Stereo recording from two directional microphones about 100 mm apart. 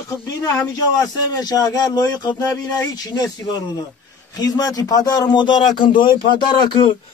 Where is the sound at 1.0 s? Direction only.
40° left (ahead or behind).